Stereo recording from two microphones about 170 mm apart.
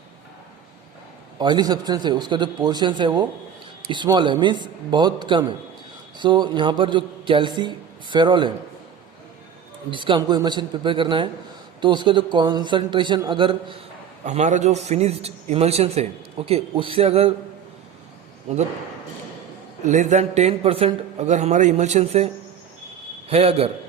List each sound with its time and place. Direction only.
1.4 s a man's voice: 25° right (ahead or behind)
9.9 s a man's voice: 30° right (ahead or behind)
14.3 s a man's voice: 45° right (ahead or behind)
19.8 s a man's voice: 45° right (ahead or behind)
23.3 s a man's voice: 35° right (ahead or behind)